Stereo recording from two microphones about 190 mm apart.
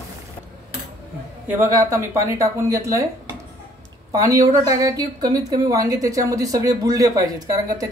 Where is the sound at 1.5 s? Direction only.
15° right (ahead or behind).